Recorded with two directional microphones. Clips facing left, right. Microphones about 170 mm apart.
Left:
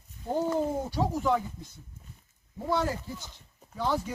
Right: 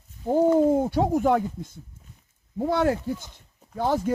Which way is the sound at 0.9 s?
55° right (ahead or behind).